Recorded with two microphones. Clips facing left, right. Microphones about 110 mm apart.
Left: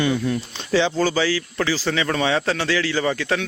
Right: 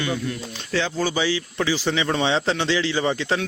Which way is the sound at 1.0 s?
15° right (ahead or behind).